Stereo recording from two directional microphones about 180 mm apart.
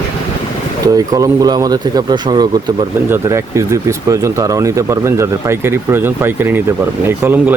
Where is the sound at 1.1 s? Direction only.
20° right (ahead or behind).